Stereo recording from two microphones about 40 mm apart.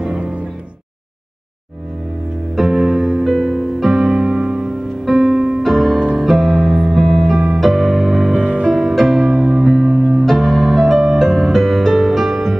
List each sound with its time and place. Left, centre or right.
2.5 s music: centre
8.4 s music: right
8.7 s music: centre
9.9 s music: centre
10.2 s music: centre